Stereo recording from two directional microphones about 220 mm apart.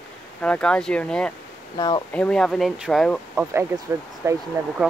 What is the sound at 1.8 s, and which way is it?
Speech, 20° left (ahead or behind).